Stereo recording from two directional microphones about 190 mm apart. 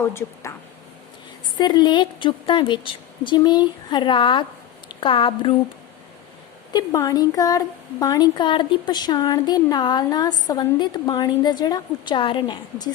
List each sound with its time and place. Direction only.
0.1 s speech: 15° left (ahead or behind)
1.5 s speech: 20° left (ahead or behind)
6.7 s speech: 20° left (ahead or behind)